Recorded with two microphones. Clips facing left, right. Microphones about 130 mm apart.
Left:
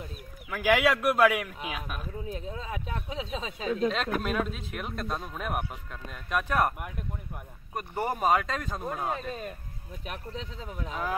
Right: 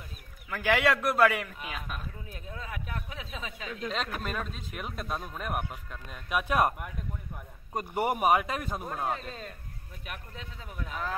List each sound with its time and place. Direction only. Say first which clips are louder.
0.5 s a man's voice: left 2 dB; 5° left (ahead or behind)
2.2 s speech: left 6 dB; 25° left (ahead or behind)
3.9 s speech: left 5 dB; centre (ahead or behind)
6.4 s speech: right 1 dB; 15° right (ahead or behind)
7.7 s speech: right 2 dB; 15° right (ahead or behind)
9.1 s a man's voice: left 3 dB; 15° left (ahead or behind)
10.0 s speech: left 5 dB; 30° left (ahead or behind)